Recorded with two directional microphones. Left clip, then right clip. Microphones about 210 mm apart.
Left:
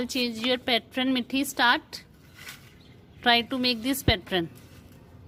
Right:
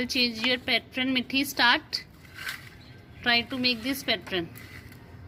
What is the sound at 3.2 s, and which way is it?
A woman's voice, 35° left (ahead or behind).